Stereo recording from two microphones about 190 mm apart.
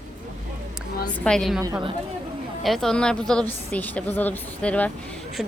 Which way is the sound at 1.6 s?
15° right (ahead or behind).